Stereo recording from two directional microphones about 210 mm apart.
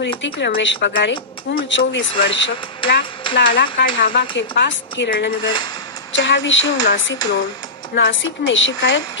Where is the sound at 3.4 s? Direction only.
55° left (ahead or behind).